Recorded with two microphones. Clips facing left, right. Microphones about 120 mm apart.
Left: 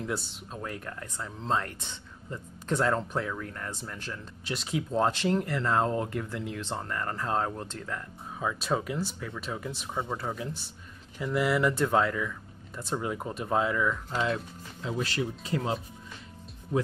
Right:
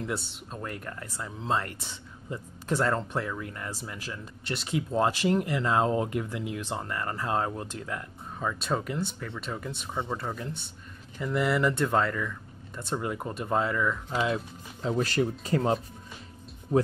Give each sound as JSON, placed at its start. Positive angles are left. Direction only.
{"t": 0.0, "sound": "speech", "side_deg": 0}
{"t": 8.4, "sound": "speech", "side_deg": 5}
{"t": 14.8, "sound": "speech", "side_deg": -40}